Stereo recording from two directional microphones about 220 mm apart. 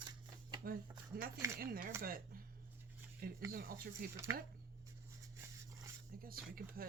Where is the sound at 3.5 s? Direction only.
40° right (ahead or behind).